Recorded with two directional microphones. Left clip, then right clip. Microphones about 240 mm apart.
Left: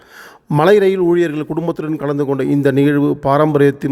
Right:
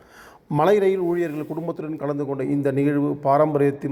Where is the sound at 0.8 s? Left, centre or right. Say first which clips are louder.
Left 8 dB; left.